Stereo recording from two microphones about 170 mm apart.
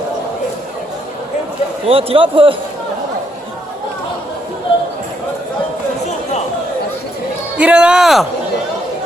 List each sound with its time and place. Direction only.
1.9 s a man's voice: 35° right (ahead or behind)
7.6 s speech: 5° right (ahead or behind)